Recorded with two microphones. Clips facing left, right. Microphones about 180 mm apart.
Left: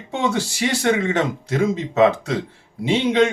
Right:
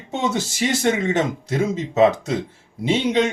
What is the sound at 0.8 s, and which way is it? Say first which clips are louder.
Speech: left 1 dB; 20° right (ahead or behind).